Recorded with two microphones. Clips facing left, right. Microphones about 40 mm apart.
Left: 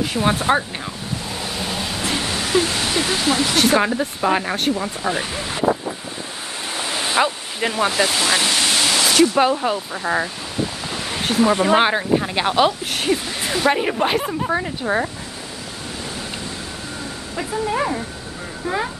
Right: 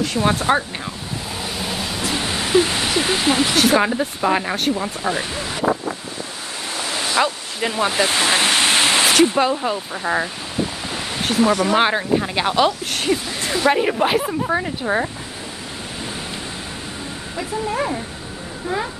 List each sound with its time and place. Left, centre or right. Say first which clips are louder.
0.0 s speech: even; centre
1.4 s waves: right 1 dB; centre
2.1 s a sound: right 3 dB; centre
3.5 s speech: right 1 dB; centre
6.7 s a sound: even; centre
7.6 s speech: left 1 dB; centre
8.1 s waterfall: right 2 dB; right
9.4 s speech: left 1 dB; centre
10.9 s a sound: even; centre
11.8 s speech: even; centre
17.4 s speech: left 1 dB; centre